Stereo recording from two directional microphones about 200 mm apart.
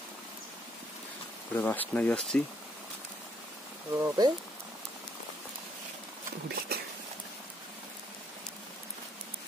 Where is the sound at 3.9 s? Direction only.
15° right (ahead or behind).